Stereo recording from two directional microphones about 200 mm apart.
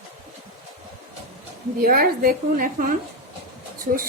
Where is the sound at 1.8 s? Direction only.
45° right (ahead or behind).